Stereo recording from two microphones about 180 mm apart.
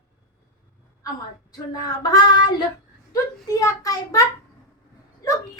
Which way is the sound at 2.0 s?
20° left (ahead or behind).